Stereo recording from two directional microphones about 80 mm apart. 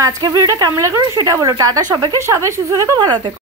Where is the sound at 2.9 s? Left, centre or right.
Right.